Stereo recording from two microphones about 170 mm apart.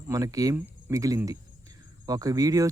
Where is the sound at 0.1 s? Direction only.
20° right (ahead or behind).